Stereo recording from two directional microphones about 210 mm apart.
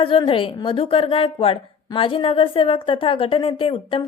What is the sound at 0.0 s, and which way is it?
Speech, 25° left (ahead or behind).